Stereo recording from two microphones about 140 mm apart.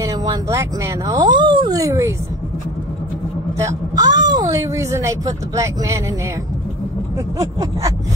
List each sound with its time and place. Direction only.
0.0 s speech: 25° right (ahead or behind)
3.5 s speech: 25° right (ahead or behind)